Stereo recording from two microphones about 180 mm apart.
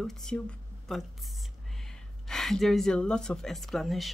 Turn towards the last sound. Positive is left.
turn(degrees=0)  # may be behind; listen again after turning